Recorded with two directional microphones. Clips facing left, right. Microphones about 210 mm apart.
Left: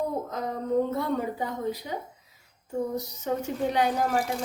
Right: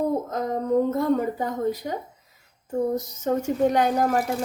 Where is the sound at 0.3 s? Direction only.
45° right (ahead or behind).